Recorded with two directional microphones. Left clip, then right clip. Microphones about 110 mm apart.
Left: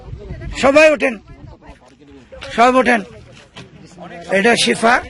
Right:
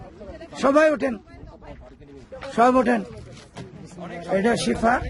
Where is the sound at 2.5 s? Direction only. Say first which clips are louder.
Left 6 dB; 5° left (ahead or behind).